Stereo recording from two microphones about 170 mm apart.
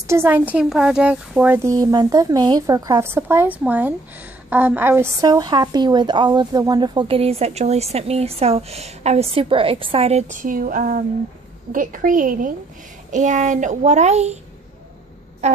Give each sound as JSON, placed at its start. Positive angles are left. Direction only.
{"t": 0.0, "sound": "a woman's voice", "side_deg": -15}
{"t": 15.4, "sound": "a woman's voice", "side_deg": -40}